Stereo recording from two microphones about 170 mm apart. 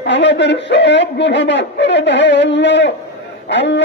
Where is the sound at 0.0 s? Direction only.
90° left.